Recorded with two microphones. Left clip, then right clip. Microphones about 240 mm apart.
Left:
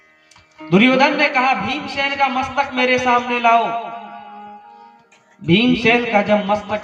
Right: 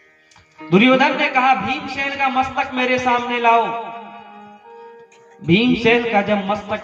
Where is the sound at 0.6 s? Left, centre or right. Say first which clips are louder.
Even; left.